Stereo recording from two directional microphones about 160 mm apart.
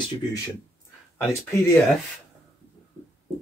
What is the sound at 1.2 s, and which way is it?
Speech, 15° left (ahead or behind).